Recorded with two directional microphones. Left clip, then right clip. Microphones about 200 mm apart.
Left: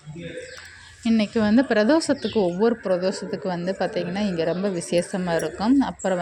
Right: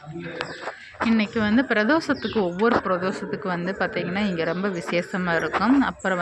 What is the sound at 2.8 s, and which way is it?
A woman's voice, 20° left (ahead or behind).